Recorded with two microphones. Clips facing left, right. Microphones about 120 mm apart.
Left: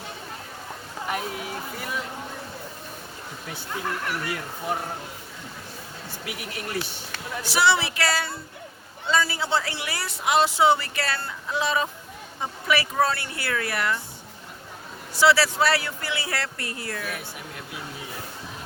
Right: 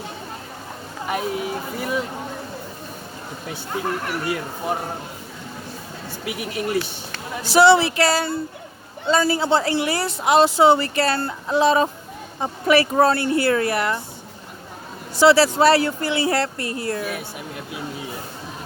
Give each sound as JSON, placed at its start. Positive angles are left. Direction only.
{"t": 1.1, "sound": "a sound", "side_deg": -20}
{"t": 3.7, "sound": "speech", "side_deg": -25}
{"t": 6.2, "sound": "speech", "side_deg": -20}
{"t": 12.8, "sound": "speech", "side_deg": -45}
{"t": 13.1, "sound": "speech", "side_deg": -30}
{"t": 15.2, "sound": "speech", "side_deg": -25}